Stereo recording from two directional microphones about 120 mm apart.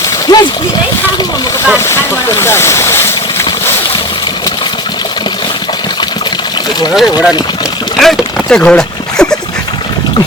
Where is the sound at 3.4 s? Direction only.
40° left (ahead or behind).